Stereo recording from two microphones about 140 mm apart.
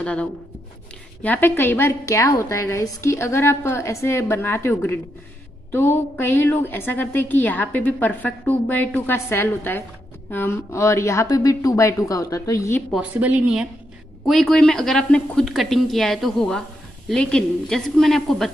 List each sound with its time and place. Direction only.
0.0 s a woman's voice: 10° left (ahead or behind)
12.9 s speech: 10° right (ahead or behind)